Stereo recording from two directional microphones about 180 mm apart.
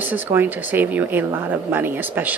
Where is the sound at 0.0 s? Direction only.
10° right (ahead or behind).